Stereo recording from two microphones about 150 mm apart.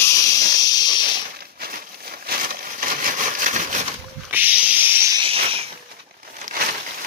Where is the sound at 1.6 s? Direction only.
85° right; by 3.8 s 60° right (ahead or behind).